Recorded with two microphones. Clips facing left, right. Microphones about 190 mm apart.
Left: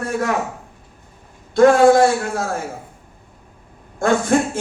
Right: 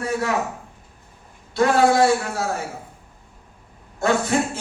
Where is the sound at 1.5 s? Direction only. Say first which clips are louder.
Left 6 dB; 50° left (ahead or behind).